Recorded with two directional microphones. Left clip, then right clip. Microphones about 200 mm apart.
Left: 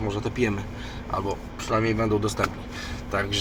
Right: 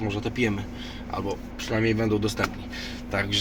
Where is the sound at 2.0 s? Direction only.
5° left (ahead or behind).